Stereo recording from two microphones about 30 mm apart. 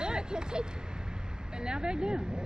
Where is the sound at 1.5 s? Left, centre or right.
Right.